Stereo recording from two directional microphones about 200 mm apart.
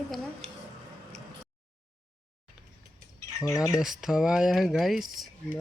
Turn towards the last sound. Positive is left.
turn(degrees=0)  # may be behind; listen again after turning